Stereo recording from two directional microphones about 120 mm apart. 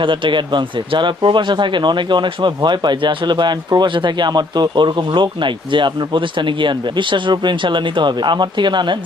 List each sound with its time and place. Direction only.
0.0 s speech: 45° right (ahead or behind)